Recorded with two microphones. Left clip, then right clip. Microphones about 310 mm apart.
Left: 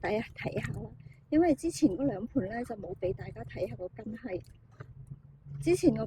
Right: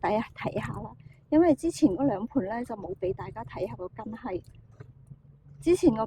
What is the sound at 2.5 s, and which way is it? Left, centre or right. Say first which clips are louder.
Speech: right 4 dB; centre.